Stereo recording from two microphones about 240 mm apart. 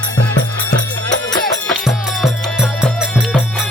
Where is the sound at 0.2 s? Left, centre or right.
Left.